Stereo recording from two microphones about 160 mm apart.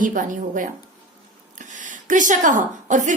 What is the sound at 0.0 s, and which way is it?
Speech, 55° right (ahead or behind).